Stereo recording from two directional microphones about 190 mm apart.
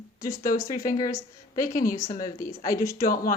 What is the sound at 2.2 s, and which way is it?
Speech, 45° left (ahead or behind).